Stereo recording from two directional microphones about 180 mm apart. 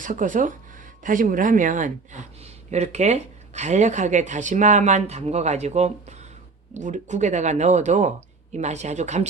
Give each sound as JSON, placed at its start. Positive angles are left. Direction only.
{"t": 0.0, "sound": "speech", "side_deg": -45}